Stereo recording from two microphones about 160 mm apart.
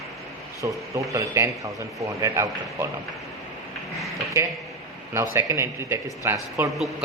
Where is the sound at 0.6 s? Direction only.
20° right (ahead or behind).